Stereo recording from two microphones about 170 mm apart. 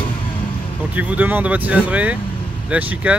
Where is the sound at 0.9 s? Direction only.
10° right (ahead or behind).